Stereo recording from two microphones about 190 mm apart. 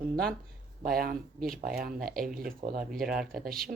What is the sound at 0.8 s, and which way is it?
Speech, 50° right (ahead or behind).